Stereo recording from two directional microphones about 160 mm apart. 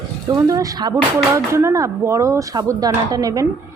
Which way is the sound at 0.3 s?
20° right (ahead or behind).